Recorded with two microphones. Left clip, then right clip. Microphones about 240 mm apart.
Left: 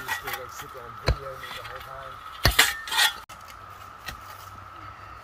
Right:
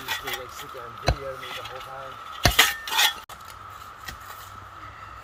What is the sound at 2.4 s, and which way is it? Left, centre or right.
Cutlery, centre.